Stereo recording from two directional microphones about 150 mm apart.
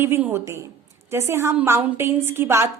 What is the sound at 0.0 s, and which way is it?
A woman's voice, 15° right (ahead or behind).